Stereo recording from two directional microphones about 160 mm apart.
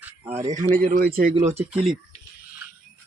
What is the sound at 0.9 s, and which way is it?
Speech, 65° right (ahead or behind).